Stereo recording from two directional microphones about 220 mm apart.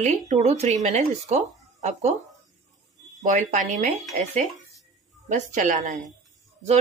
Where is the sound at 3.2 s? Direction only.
35° right (ahead or behind).